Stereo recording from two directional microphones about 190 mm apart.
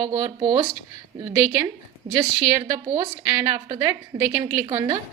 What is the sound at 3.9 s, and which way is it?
Speech, 10° right (ahead or behind).